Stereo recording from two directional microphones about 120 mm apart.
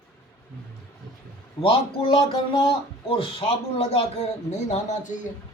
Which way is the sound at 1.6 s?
55° left (ahead or behind).